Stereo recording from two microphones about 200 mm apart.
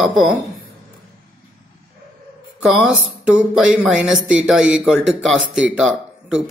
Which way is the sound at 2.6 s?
5° right (ahead or behind).